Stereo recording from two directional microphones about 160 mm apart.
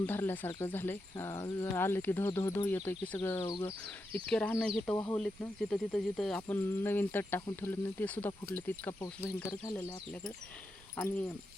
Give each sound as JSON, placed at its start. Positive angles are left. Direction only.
{"t": 0.0, "sound": "speech", "side_deg": 15}